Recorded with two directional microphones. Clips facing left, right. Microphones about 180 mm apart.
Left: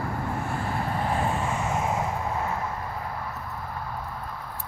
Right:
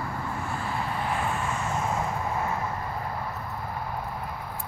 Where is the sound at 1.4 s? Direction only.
20° left (ahead or behind).